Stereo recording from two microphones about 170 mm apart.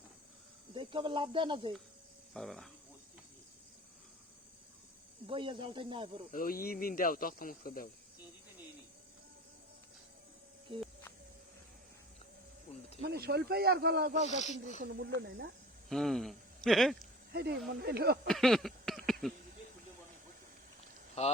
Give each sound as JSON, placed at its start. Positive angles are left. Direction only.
{"t": 0.7, "sound": "speech", "side_deg": -30}
{"t": 2.3, "sound": "speech", "side_deg": 0}
{"t": 5.2, "sound": "speech", "side_deg": -30}
{"t": 6.3, "sound": "speech", "side_deg": 55}
{"t": 10.7, "sound": "speech", "side_deg": -30}
{"t": 13.0, "sound": "speech", "side_deg": -70}
{"t": 14.3, "sound": "speech", "side_deg": 45}
{"t": 14.9, "sound": "speech", "side_deg": -75}
{"t": 15.9, "sound": "speech", "side_deg": 0}
{"t": 17.0, "sound": "a sound", "side_deg": -70}
{"t": 17.7, "sound": "speech", "side_deg": -65}
{"t": 18.3, "sound": "a sound", "side_deg": 0}
{"t": 21.2, "sound": "speech", "side_deg": 40}